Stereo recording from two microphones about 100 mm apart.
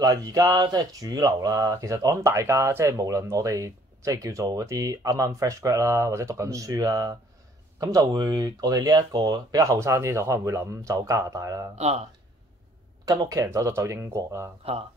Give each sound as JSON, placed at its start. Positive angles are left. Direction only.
{"t": 0.0, "sound": "speech", "side_deg": -35}
{"t": 11.7, "sound": "speech", "side_deg": -90}
{"t": 13.0, "sound": "speech", "side_deg": -35}
{"t": 14.6, "sound": "speech", "side_deg": -75}